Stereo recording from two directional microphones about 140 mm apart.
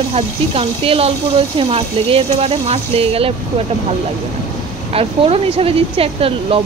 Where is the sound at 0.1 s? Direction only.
45° right (ahead or behind).